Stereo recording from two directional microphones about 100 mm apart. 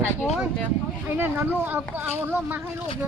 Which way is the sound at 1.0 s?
20° right (ahead or behind).